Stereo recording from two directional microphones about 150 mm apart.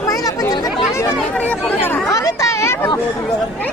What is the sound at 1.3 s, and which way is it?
Chatter, 10° left (ahead or behind).